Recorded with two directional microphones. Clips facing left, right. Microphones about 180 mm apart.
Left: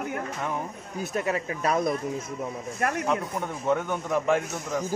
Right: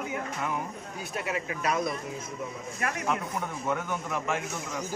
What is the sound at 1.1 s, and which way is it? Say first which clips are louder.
Speech: left 4 dB; 40° left (ahead or behind).